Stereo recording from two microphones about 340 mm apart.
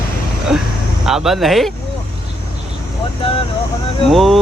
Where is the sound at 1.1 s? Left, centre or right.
Centre.